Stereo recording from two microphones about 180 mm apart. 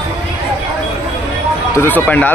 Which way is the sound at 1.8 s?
10° left (ahead or behind).